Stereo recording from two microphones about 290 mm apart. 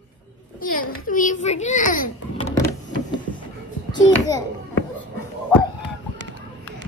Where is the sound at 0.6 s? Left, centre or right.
Left.